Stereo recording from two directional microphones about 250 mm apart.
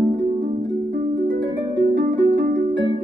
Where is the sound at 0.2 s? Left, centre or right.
Right.